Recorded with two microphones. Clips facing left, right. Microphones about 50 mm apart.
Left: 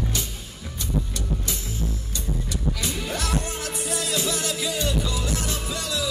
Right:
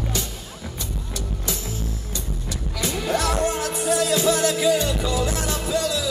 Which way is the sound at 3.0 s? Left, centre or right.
Right.